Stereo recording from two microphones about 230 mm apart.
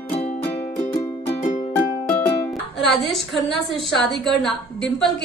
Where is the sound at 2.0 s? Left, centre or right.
Centre.